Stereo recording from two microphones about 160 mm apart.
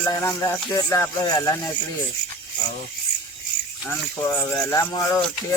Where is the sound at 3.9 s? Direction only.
15° left (ahead or behind).